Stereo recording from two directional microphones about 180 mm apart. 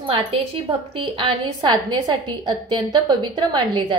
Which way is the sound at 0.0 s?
30° right (ahead or behind).